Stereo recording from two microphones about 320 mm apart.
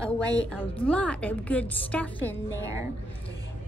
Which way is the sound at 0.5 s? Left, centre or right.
Centre.